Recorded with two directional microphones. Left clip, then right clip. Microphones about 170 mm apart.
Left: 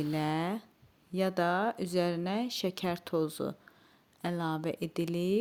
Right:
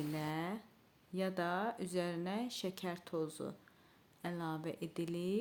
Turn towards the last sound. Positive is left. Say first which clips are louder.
# left 8 dB
turn(degrees=45)  # may be behind; listen again after turning